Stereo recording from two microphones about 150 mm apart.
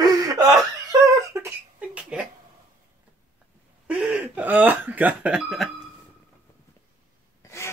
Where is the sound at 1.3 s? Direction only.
20° right (ahead or behind).